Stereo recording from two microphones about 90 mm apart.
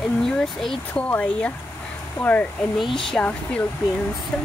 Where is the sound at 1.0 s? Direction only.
15° left (ahead or behind).